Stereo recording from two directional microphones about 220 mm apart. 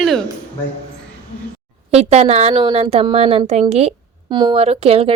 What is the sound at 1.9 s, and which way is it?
A woman's voice, 30° right (ahead or behind).